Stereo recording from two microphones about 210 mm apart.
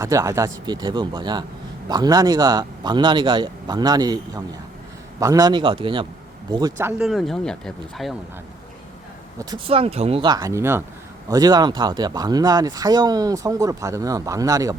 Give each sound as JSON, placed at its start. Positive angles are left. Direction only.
{"t": 0.0, "sound": "speech", "side_deg": -15}
{"t": 7.1, "sound": "speech", "side_deg": 0}
{"t": 9.4, "sound": "speech", "side_deg": -20}